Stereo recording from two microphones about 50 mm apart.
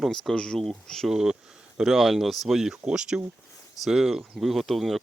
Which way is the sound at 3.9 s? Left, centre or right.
Centre.